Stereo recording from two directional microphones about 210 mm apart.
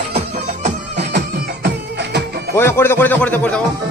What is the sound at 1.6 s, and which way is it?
Music, 55° right (ahead or behind).